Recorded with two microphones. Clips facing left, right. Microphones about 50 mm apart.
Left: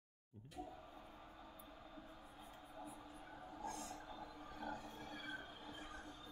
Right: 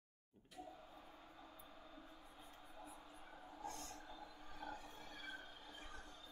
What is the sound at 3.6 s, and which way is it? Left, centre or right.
Train, centre.